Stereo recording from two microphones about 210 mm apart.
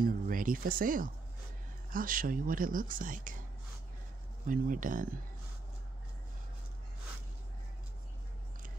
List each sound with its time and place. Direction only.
0.0 s speech: 40° right (ahead or behind)
4.5 s speech: 40° right (ahead or behind)